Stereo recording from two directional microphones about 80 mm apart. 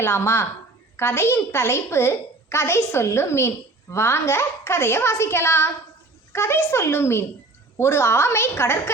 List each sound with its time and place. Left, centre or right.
0.0 s a woman's voice: left